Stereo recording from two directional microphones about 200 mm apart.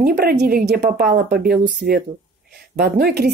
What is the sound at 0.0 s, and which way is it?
Speech, 50° right (ahead or behind).